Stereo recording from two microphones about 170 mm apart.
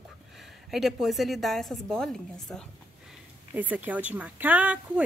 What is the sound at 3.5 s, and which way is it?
A woman's voice, 10° right (ahead or behind).